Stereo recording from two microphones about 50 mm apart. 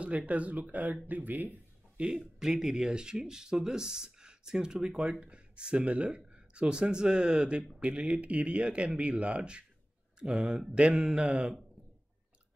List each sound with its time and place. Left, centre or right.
0.3 s speech: right
2.0 s speech: centre
7.8 s speech: right
10.3 s speech: centre